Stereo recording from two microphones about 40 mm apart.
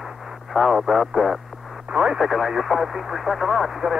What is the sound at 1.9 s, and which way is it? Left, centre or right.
Speech, centre.